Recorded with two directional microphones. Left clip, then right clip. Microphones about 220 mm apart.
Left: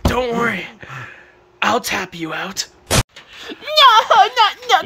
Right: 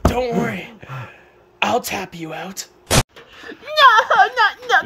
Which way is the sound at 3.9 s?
45° left (ahead or behind).